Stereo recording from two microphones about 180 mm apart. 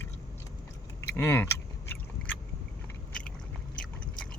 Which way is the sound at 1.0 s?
10° left (ahead or behind).